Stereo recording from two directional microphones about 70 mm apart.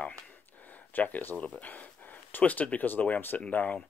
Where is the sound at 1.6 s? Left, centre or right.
Left.